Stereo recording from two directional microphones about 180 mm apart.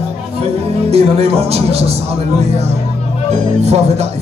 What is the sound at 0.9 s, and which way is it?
Speech, 35° right (ahead or behind).